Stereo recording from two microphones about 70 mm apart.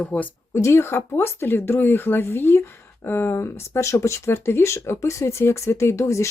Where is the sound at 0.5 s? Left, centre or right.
Left.